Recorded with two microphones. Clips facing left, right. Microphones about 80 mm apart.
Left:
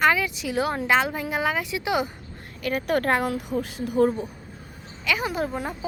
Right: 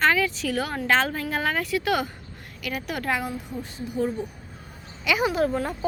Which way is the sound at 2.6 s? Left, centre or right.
Left.